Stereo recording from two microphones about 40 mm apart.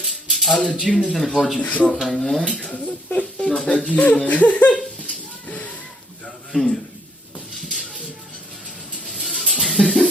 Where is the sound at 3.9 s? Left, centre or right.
Left.